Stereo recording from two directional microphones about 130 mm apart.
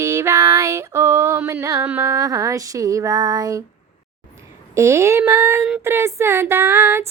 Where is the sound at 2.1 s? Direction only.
25° right (ahead or behind).